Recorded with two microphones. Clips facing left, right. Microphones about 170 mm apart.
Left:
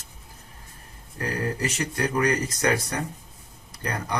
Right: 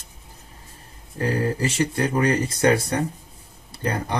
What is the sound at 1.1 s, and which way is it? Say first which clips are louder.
Speech: right 5 dB; 30° right (ahead or behind).